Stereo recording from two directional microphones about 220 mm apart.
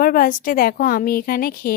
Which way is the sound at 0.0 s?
40° left (ahead or behind).